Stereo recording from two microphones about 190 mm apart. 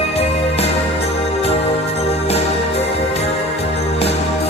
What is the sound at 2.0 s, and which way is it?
Music, 35° left (ahead or behind).